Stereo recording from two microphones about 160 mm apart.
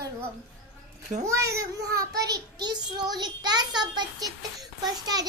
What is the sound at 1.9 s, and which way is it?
A child's voice, 25° right (ahead or behind).